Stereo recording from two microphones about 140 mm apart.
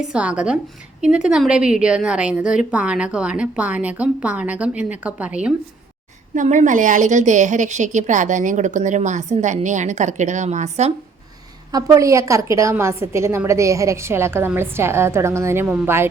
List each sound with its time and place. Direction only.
0.1 s a woman's voice: 5° right (ahead or behind)
6.3 s a woman's voice: 60° right (ahead or behind)
11.7 s a woman's voice: 20° right (ahead or behind)